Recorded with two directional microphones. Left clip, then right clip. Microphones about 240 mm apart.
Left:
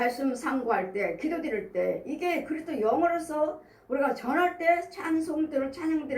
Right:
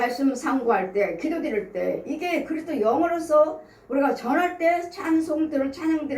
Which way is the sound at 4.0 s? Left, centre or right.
Left.